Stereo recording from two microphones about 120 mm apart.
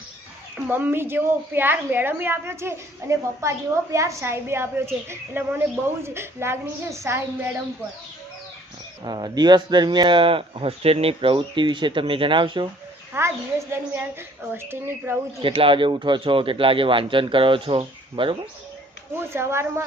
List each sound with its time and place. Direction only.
0.5 s a woman's voice: 15° right (ahead or behind)
9.0 s speech: 35° right (ahead or behind)
13.1 s a woman's voice: 20° right (ahead or behind)
15.4 s speech: 50° right (ahead or behind)
19.2 s a woman's voice: 20° right (ahead or behind)